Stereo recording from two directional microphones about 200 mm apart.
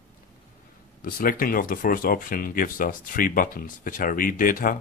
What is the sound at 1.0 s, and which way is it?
Speech, 45° left (ahead or behind).